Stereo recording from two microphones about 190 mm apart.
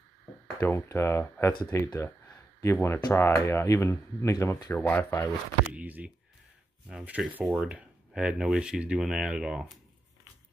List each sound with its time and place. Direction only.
0.6 s speech: 10° left (ahead or behind)
5.7 s speech: 10° right (ahead or behind)